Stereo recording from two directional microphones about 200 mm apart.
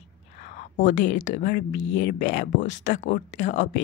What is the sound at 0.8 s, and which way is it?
Speech, 60° left (ahead or behind).